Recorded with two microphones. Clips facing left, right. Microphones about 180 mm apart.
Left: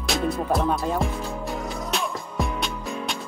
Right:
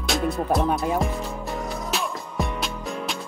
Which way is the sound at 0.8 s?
5° right (ahead or behind).